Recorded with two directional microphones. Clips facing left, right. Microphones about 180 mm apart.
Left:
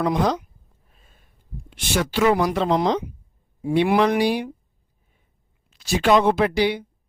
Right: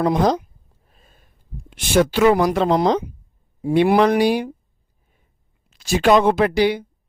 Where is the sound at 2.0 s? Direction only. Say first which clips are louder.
Right 5 dB; 50° right (ahead or behind).